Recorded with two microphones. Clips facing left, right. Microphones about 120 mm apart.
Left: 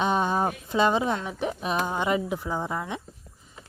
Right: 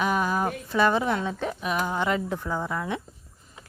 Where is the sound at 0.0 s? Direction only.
25° left (ahead or behind).